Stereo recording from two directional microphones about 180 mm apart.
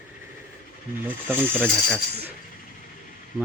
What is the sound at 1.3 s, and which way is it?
Speech, 10° right (ahead or behind).